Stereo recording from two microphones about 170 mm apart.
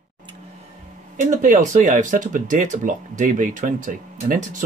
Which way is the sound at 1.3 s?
50° right (ahead or behind).